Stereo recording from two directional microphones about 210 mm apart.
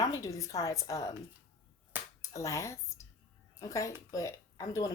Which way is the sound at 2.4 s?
15° left (ahead or behind).